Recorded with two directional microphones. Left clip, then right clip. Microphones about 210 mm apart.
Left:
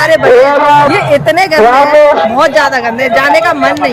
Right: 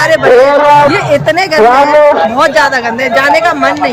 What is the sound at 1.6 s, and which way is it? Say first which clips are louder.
Speech: right 1 dB; 40° left (ahead or behind).